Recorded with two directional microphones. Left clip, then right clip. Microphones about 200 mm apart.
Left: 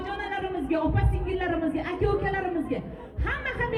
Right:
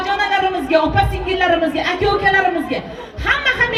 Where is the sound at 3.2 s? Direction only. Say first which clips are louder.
Right 14 dB; 35° right (ahead or behind).